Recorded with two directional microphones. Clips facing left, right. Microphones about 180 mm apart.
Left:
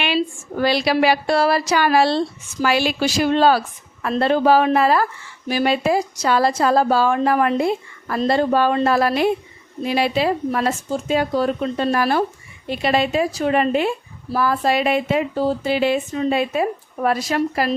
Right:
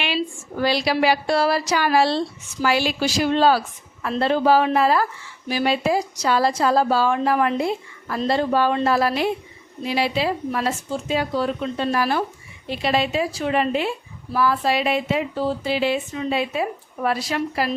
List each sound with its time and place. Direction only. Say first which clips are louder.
0.6 s a woman's voice: left 2 dB; 60° left (ahead or behind)